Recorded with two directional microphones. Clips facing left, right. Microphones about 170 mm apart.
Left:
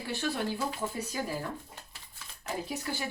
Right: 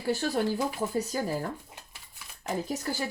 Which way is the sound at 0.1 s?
40° right (ahead or behind).